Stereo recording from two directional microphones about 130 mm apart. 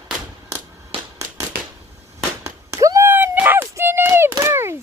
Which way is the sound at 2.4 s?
25° right (ahead or behind).